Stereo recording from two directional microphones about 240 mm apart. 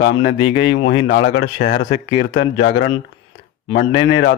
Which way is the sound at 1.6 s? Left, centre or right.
Left.